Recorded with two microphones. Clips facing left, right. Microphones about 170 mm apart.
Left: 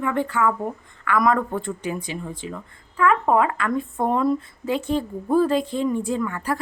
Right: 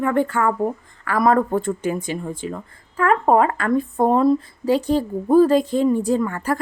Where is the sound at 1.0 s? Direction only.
35° right (ahead or behind).